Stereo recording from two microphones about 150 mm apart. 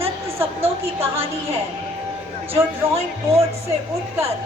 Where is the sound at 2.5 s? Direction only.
40° right (ahead or behind).